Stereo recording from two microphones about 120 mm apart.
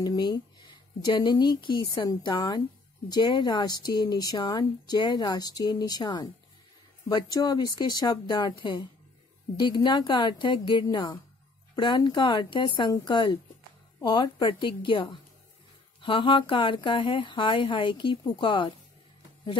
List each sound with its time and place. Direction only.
0.0 s speech: 35° left (ahead or behind)